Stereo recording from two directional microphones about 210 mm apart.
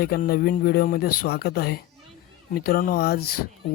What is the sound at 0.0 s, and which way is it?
Speech, 45° left (ahead or behind).